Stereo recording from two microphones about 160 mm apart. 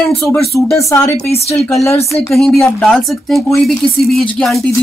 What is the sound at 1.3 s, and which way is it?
Speech, 40° left (ahead or behind).